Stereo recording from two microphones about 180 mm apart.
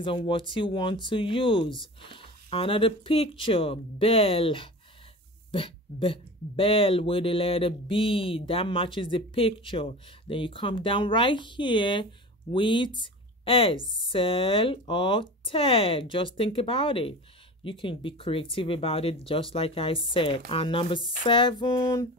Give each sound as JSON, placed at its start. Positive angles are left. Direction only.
{"t": 0.0, "sound": "speech", "side_deg": 30}